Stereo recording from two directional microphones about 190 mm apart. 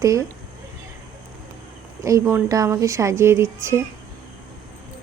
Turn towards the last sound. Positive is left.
turn(degrees=-15)  # may be behind; listen again after turning